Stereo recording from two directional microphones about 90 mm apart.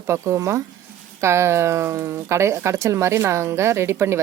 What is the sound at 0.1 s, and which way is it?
Speech, 30° right (ahead or behind).